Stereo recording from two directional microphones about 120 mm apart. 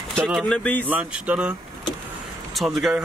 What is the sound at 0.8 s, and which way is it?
Speech, 10° right (ahead or behind).